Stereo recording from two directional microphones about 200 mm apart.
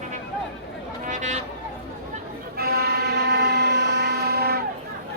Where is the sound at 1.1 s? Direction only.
35° right (ahead or behind).